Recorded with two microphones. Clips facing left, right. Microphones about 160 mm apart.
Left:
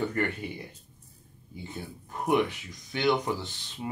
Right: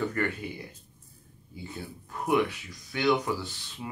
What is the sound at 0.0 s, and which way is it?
Speech, 20° left (ahead or behind).